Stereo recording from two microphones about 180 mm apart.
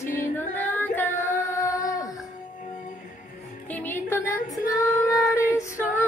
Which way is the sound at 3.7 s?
10° left (ahead or behind).